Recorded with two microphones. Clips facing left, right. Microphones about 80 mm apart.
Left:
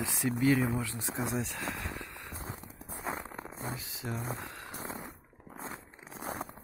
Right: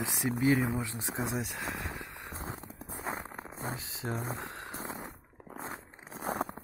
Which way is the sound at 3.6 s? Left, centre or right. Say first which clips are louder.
Right 3 dB; right.